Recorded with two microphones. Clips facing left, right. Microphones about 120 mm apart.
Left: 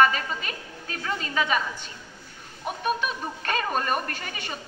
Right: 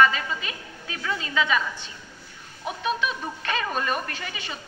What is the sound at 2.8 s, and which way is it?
A woman's voice, 45° left (ahead or behind).